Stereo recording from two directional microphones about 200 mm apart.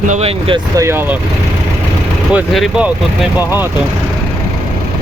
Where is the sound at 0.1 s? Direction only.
30° right (ahead or behind).